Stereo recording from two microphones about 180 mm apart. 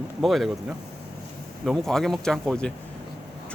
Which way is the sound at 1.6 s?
Centre (ahead or behind).